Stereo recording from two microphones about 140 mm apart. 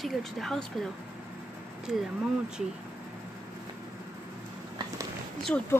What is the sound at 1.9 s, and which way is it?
Speech, 5° right (ahead or behind).